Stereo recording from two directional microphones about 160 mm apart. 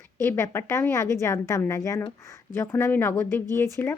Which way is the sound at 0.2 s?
15° left (ahead or behind).